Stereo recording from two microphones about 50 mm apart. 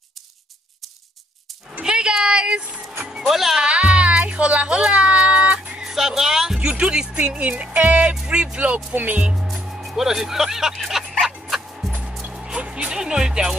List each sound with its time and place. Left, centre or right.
1.7 s a sound: centre
3.1 s speech: centre
3.6 s music: right
5.9 s music: centre
6.6 s speech: centre
9.2 s speech: centre
9.5 s music: centre
12.4 s speech: centre